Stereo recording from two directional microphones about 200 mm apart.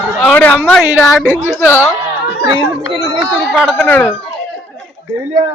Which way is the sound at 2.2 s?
25° right (ahead or behind).